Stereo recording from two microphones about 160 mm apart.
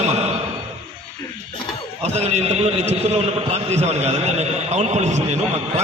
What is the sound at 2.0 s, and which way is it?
A man's voice, 40° right (ahead or behind).